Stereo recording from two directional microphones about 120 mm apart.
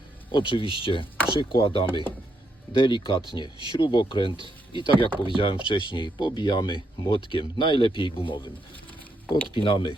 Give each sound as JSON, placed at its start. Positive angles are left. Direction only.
{"t": 0.3, "sound": "speech", "side_deg": 45}
{"t": 9.6, "sound": "speech", "side_deg": 45}